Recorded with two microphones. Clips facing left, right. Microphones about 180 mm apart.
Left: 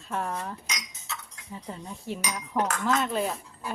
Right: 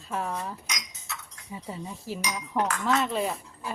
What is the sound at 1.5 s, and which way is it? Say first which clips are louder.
Dishes: right 1 dB; 5° right (ahead or behind).